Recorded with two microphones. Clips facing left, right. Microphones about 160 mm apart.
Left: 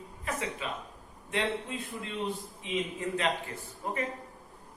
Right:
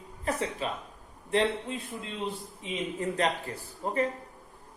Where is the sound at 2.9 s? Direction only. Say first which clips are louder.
Right 6 dB; 40° right (ahead or behind).